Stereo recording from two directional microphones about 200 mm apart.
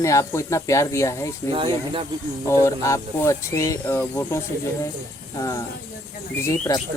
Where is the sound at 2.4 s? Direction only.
15° left (ahead or behind).